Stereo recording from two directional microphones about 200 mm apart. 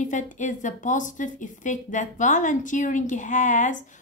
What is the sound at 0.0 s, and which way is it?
A woman's voice, 40° left (ahead or behind).